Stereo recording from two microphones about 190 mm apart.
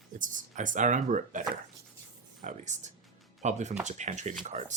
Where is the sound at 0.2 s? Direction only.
45° right (ahead or behind).